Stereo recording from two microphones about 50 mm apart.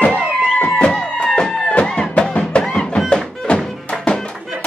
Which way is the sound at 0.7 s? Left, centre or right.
Left.